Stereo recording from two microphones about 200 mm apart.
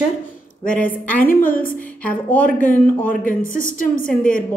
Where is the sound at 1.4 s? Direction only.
45° left (ahead or behind).